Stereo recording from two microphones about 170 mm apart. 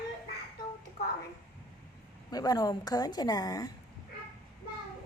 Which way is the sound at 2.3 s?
20° left (ahead or behind).